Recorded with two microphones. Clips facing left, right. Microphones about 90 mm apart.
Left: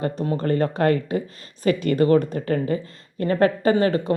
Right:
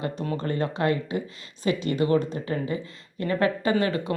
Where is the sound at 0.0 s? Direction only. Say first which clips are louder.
Left 5 dB; 40° left (ahead or behind).